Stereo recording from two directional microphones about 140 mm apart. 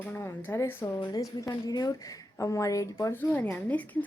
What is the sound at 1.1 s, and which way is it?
Speech, 25° left (ahead or behind).